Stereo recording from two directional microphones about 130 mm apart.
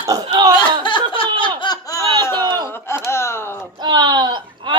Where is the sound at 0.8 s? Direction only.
35° left (ahead or behind).